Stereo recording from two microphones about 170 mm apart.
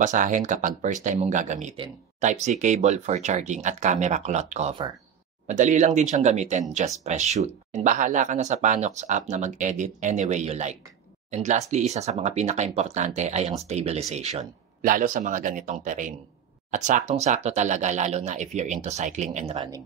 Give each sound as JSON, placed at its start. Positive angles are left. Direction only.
{"t": 0.0, "sound": "speech", "side_deg": -50}
{"t": 14.8, "sound": "speech", "side_deg": -55}